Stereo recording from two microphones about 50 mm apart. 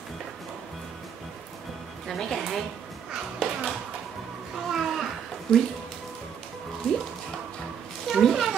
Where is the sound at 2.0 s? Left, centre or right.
Centre.